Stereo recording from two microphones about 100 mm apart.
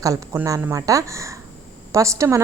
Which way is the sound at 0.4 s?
35° right (ahead or behind).